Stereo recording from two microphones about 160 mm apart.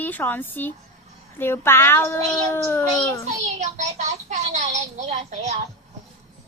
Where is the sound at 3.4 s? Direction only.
45° right (ahead or behind).